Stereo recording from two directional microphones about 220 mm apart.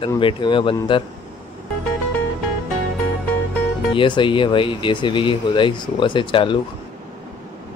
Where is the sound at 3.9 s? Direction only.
20° left (ahead or behind).